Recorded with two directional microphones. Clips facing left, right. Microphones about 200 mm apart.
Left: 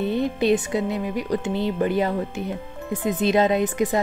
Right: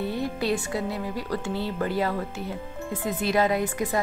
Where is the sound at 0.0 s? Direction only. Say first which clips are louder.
Left 6 dB; 20° left (ahead or behind).